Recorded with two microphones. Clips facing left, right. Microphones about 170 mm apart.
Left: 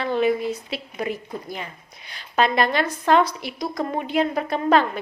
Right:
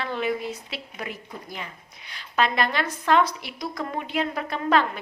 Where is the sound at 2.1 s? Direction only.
40° left (ahead or behind).